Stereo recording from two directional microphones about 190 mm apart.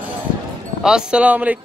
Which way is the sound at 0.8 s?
5° right (ahead or behind).